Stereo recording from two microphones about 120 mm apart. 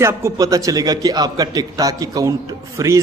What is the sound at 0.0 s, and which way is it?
A man's voice, 25° right (ahead or behind).